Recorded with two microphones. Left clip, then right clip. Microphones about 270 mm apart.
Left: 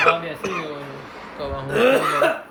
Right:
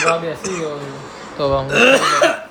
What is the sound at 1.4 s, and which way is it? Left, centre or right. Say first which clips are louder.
Speech: right 6 dB; right.